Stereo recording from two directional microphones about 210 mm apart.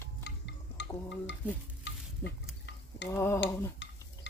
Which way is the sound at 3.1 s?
10° left (ahead or behind).